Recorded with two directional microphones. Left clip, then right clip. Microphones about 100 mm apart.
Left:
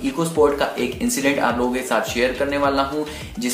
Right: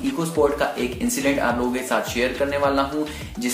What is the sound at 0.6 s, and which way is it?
Speech, 10° left (ahead or behind).